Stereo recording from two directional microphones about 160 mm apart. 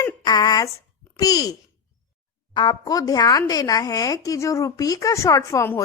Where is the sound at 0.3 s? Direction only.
25° left (ahead or behind).